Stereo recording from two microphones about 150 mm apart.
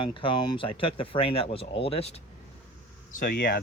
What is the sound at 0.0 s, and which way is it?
Speech, 35° left (ahead or behind).